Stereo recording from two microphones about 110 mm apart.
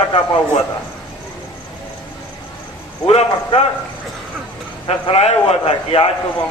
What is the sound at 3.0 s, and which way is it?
Speech, 70° left (ahead or behind).